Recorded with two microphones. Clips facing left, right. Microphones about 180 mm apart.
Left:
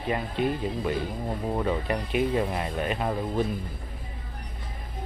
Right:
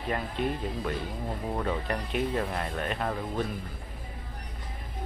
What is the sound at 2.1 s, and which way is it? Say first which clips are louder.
Speech: left 4 dB; 10° left (ahead or behind).